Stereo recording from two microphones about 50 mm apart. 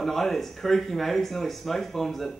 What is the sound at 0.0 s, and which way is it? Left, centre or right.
Speech, centre.